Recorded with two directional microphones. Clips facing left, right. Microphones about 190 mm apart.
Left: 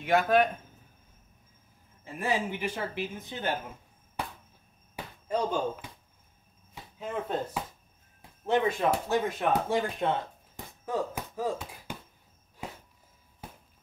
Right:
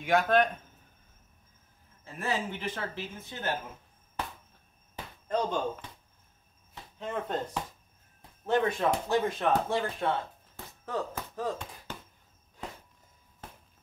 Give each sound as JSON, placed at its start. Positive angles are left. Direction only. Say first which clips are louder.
{"t": 0.0, "sound": "speech", "louder": "left 1 dB", "side_deg": 5}
{"t": 2.0, "sound": "speech", "louder": "left 3 dB", "side_deg": 15}
{"t": 4.9, "sound": "basketball bounce", "louder": "even", "side_deg": 10}
{"t": 6.7, "sound": "speech", "louder": "even", "side_deg": 5}
{"t": 8.2, "sound": "a sound", "louder": "left 1 dB", "side_deg": 20}
{"t": 9.0, "sound": "speech", "louder": "even", "side_deg": 10}